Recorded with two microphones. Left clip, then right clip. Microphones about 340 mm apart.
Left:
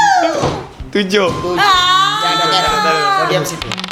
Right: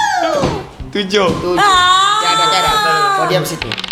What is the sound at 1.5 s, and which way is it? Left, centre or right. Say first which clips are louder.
Music: right 2 dB; right.